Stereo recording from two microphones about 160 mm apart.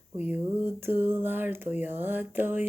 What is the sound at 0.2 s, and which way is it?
A woman's voice, 10° right (ahead or behind).